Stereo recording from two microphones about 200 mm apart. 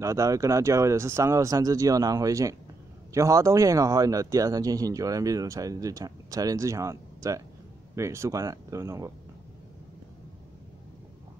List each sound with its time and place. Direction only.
0.0 s speech: 15° right (ahead or behind)